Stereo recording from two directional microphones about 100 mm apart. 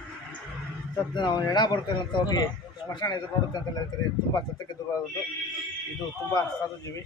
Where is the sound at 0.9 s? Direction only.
50° left (ahead or behind).